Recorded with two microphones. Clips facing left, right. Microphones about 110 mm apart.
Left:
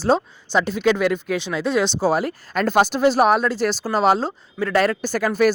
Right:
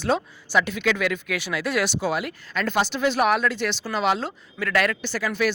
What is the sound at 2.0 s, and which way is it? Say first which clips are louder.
Speech: left 6 dB; 35° left (ahead or behind).